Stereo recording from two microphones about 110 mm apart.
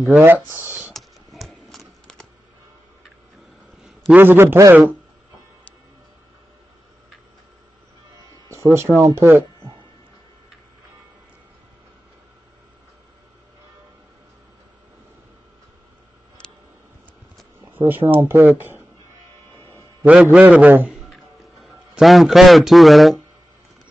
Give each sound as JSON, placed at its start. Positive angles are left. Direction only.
{"t": 0.2, "sound": "speech", "side_deg": -20}
{"t": 0.9, "sound": "computer keyboard", "side_deg": 0}
{"t": 4.1, "sound": "speech", "side_deg": -20}
{"t": 8.5, "sound": "a sound", "side_deg": -25}
{"t": 9.0, "sound": "speech", "side_deg": -25}
{"t": 17.7, "sound": "speech", "side_deg": -20}
{"t": 19.6, "sound": "a sound", "side_deg": 20}
{"t": 20.1, "sound": "a man's voice", "side_deg": -10}
{"t": 20.9, "sound": "music", "side_deg": 0}